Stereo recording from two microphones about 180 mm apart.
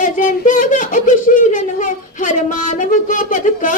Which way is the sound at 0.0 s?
45° left (ahead or behind).